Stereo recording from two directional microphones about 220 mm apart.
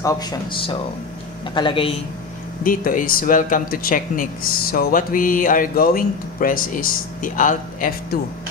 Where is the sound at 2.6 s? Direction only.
40° left (ahead or behind).